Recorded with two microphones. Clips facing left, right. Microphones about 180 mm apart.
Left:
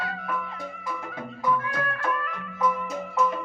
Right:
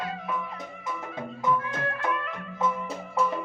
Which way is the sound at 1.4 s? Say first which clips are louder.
Left 1 dB; 20° right (ahead or behind).